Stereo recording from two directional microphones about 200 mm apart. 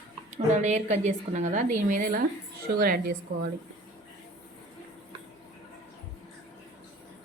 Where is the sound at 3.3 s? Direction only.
65° right (ahead or behind).